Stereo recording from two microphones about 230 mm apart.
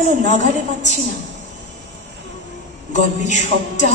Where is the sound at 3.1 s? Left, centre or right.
Left.